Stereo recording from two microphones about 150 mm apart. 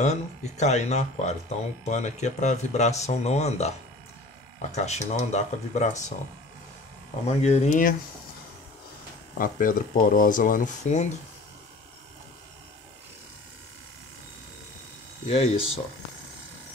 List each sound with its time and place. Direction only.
0.0 s speech: 50° left (ahead or behind)
7.2 s speech: 45° left (ahead or behind)
9.4 s speech: 65° left (ahead or behind)
15.2 s speech: 40° left (ahead or behind)